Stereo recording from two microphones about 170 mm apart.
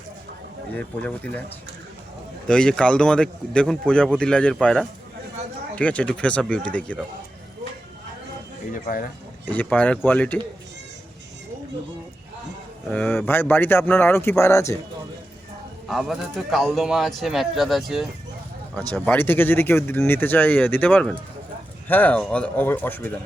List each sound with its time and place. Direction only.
0.8 s speech: 10° left (ahead or behind)
2.5 s speech: 5° left (ahead or behind)
8.7 s speech: 55° left (ahead or behind)
9.5 s speech: 10° left (ahead or behind)
12.9 s speech: 10° left (ahead or behind)
15.9 s speech: centre (ahead or behind)
18.9 s speech: 10° left (ahead or behind)